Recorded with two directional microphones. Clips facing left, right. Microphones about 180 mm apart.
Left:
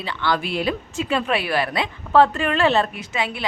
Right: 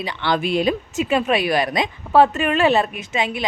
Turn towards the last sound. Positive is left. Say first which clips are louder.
# right 3 dB
turn(degrees=-20)  # may be behind; listen again after turning